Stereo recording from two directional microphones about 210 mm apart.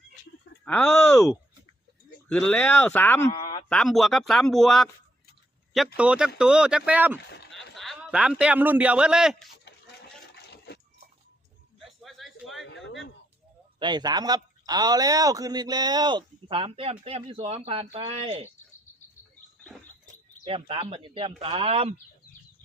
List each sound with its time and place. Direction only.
0.6 s speech: 5° left (ahead or behind)
2.3 s speech: 5° left (ahead or behind)
6.0 s a man's voice: 5° right (ahead or behind)
10.3 s a sound: 50° left (ahead or behind)
12.0 s a sound: centre (ahead or behind)
13.7 s a man's voice: 20° right (ahead or behind)
20.4 s a man's voice: 25° right (ahead or behind)